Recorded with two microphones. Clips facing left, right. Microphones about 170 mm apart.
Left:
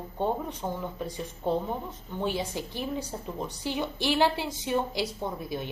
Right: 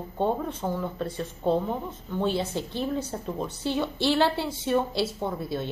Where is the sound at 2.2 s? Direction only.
15° left (ahead or behind).